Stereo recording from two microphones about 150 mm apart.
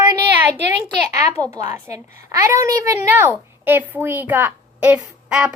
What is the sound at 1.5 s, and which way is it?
A woman's voice, 20° right (ahead or behind).